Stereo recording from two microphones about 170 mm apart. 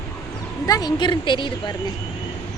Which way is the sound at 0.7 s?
25° left (ahead or behind).